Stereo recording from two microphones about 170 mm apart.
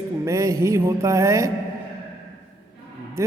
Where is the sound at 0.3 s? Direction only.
20° right (ahead or behind).